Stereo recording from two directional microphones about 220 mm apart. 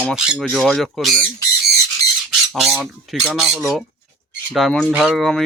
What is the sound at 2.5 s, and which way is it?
Speech, centre (ahead or behind).